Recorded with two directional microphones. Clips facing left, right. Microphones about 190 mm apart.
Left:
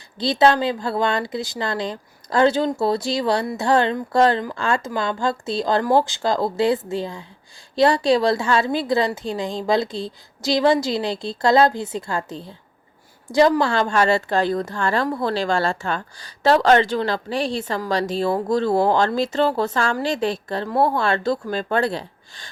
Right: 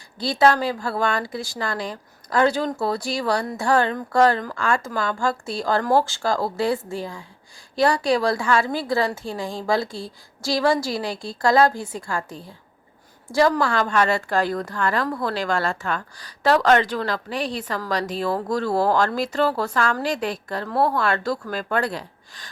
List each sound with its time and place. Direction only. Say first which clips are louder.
0.2 s a woman's voice: left 2 dB; 20° left (ahead or behind)